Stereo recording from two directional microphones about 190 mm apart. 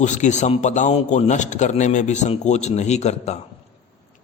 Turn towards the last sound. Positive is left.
turn(degrees=35)  # may be behind; listen again after turning